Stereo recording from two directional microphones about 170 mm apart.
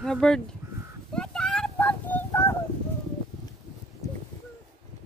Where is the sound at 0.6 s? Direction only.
15° right (ahead or behind).